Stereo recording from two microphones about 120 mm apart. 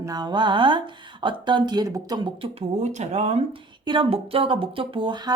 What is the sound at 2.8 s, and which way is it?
Speech, 75° right (ahead or behind).